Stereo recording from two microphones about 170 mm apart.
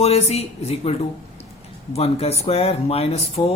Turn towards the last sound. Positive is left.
turn(degrees=35)  # may be behind; listen again after turning